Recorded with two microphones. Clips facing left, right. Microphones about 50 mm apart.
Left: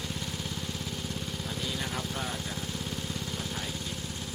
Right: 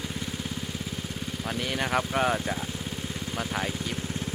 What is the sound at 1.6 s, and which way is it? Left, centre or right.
Speech, right.